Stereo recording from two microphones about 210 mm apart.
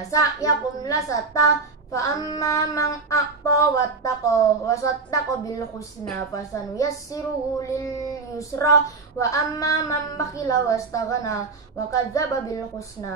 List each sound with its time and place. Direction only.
0.1 s a woman's voice: 15° left (ahead or behind)